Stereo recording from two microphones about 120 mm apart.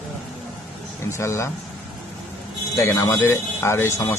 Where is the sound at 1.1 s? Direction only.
25° left (ahead or behind).